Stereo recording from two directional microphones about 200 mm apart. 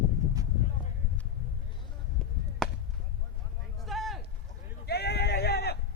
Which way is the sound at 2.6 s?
Centre (ahead or behind).